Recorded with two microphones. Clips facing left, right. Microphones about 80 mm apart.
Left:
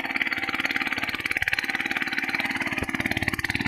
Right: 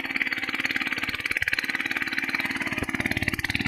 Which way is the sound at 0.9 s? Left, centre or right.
Centre.